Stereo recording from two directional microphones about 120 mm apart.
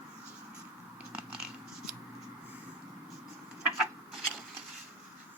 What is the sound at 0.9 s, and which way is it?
Scissors, 10° right (ahead or behind).